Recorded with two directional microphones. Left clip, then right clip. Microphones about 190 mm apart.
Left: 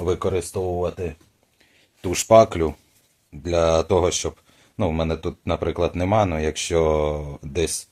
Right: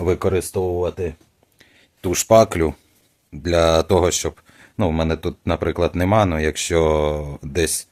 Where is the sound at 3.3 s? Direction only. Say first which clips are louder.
Right 3 dB; 40° right (ahead or behind).